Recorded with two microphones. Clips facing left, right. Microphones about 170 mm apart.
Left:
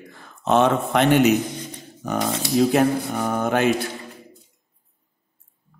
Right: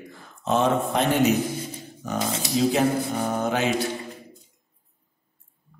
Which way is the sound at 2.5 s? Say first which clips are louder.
Left 3 dB; 55° left (ahead or behind).